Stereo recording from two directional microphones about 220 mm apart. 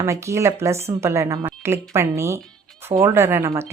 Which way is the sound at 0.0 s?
15° right (ahead or behind).